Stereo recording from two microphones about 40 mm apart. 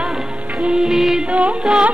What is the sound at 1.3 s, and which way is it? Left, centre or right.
Music, right.